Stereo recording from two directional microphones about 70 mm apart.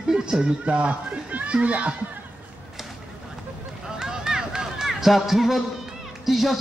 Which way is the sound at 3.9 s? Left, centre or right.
Centre.